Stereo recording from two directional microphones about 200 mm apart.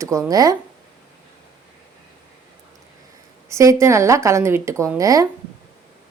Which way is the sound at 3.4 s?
15° right (ahead or behind).